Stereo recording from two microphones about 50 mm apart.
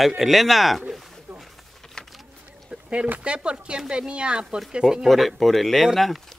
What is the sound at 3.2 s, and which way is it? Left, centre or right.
Speech, centre.